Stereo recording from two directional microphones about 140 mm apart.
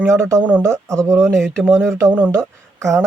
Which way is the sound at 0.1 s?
20° right (ahead or behind).